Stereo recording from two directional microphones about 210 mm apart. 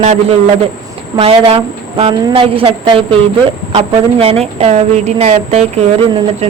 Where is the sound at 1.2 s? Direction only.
25° right (ahead or behind).